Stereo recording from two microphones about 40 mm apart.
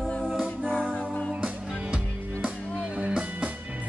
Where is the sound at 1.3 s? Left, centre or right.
Right.